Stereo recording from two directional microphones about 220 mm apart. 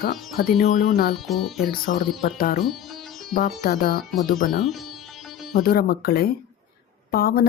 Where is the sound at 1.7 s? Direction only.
40° left (ahead or behind).